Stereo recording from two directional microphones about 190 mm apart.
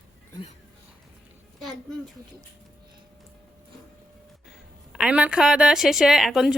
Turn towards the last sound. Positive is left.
turn(degrees=0)  # may be behind; listen again after turning